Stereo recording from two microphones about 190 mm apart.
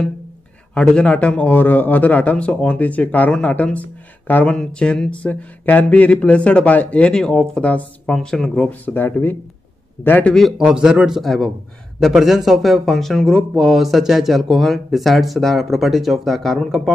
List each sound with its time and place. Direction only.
0.7 s a man's voice: 5° left (ahead or behind)